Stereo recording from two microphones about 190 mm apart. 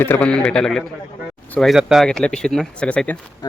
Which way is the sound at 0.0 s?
10° left (ahead or behind).